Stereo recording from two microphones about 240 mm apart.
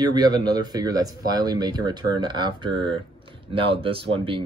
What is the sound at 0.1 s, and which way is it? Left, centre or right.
Speech, centre.